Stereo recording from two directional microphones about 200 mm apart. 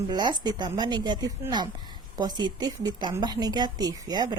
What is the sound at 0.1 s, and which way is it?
Speech, 20° right (ahead or behind).